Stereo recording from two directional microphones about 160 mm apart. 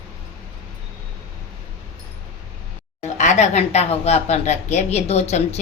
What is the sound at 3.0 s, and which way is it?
Speech, 50° left (ahead or behind).